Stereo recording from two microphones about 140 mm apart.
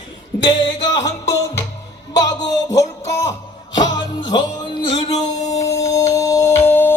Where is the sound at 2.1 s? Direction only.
25° left (ahead or behind).